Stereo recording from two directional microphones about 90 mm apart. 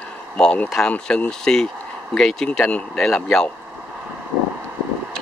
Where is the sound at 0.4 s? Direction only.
10° left (ahead or behind).